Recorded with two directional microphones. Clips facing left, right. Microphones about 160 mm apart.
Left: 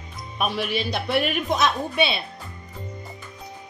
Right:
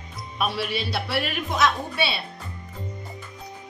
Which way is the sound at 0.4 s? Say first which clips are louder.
Left 1 dB; 15° left (ahead or behind).